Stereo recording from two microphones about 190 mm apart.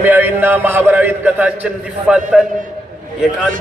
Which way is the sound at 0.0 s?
10° right (ahead or behind).